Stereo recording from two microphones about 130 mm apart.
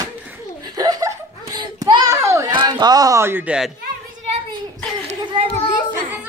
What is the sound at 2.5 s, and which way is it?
A man's voice, 35° right (ahead or behind).